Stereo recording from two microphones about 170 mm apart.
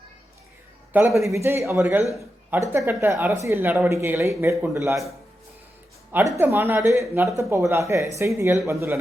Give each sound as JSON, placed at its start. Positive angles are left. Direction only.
{"t": 1.2, "sound": "speech", "side_deg": -15}
{"t": 6.3, "sound": "speech", "side_deg": -15}